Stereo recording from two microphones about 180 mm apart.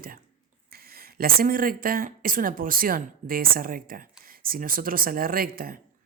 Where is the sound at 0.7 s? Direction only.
55° right (ahead or behind).